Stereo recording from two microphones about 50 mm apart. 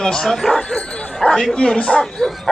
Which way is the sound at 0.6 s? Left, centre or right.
Centre.